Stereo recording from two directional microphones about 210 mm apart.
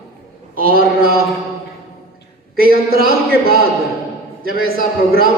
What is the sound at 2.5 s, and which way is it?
A man's voice, 45° right (ahead or behind).